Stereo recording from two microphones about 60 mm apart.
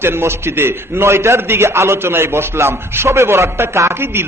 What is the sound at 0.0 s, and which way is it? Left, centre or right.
A man's voice, right.